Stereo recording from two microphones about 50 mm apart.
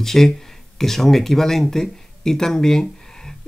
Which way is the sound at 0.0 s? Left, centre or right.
Centre.